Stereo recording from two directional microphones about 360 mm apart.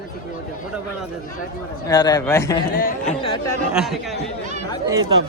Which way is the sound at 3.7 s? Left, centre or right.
Centre.